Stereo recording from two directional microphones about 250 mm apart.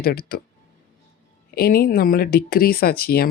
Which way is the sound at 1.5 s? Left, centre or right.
Left.